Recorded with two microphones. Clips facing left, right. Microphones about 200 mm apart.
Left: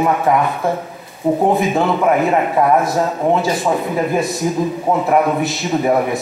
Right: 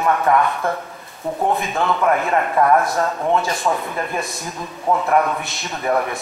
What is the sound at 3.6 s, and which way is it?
A man's voice, 10° left (ahead or behind).